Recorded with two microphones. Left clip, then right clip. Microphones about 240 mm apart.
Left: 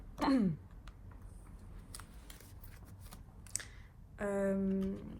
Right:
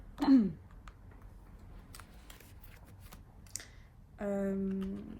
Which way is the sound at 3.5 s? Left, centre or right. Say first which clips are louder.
Left 2 dB; left.